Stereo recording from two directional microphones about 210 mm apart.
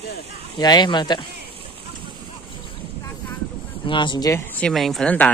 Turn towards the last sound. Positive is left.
turn(degrees=5)  # may be behind; listen again after turning